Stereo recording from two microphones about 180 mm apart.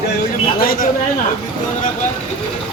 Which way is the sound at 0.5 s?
55° left (ahead or behind).